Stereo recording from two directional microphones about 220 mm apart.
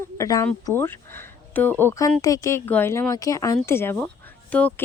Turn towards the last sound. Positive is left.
turn(degrees=5)  # may be behind; listen again after turning